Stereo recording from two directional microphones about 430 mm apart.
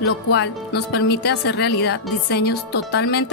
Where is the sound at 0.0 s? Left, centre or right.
Left.